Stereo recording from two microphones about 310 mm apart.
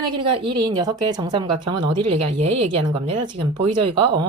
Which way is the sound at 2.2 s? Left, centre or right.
Right.